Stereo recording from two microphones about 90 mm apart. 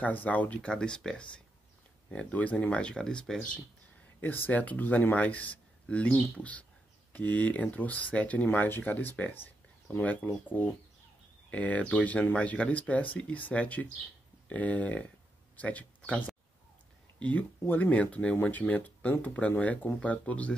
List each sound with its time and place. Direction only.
0.0 s speech: 20° left (ahead or behind)
4.2 s speech: 20° left (ahead or behind)